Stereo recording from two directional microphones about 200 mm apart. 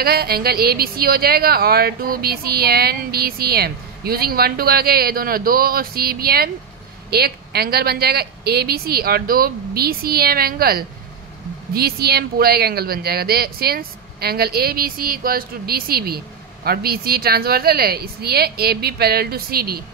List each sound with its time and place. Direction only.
0.0 s a woman's voice: 50° right (ahead or behind)